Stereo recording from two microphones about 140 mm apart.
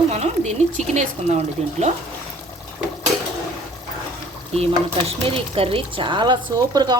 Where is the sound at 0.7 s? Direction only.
55° right (ahead or behind).